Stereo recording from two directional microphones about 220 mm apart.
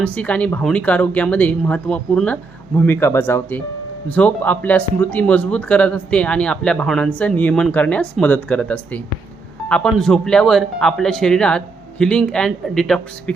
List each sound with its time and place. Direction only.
0.0 s speech: 5° left (ahead or behind)